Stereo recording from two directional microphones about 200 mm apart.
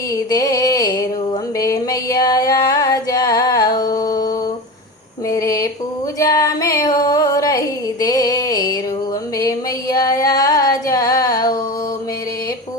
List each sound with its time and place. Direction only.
0.3 s music: 15° left (ahead or behind)
5.3 s a sound: 15° left (ahead or behind)
6.1 s female singing: 20° left (ahead or behind)
8.0 s music: 20° left (ahead or behind)
9.4 s singing: 15° left (ahead or behind)